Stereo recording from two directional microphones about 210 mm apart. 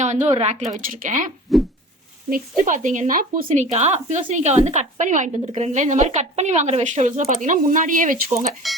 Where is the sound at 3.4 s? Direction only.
30° right (ahead or behind).